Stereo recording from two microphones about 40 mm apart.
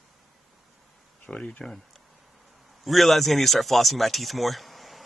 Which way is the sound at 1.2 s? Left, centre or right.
Left.